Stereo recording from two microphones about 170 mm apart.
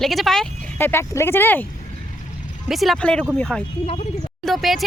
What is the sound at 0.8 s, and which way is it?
Speech, 15° left (ahead or behind).